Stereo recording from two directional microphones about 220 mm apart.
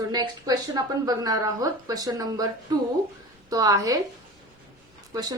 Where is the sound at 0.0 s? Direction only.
15° right (ahead or behind).